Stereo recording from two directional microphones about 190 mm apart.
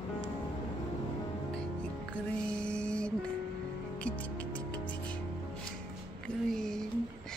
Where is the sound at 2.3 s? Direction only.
5° left (ahead or behind).